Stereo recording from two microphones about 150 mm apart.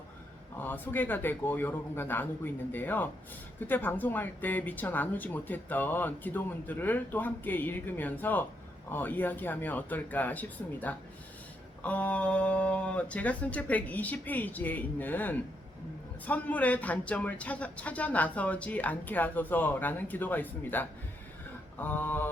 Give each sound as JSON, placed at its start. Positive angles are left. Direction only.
{"t": 0.5, "sound": "speech", "side_deg": 15}